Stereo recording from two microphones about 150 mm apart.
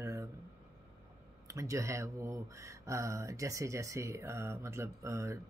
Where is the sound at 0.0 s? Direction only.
20° right (ahead or behind).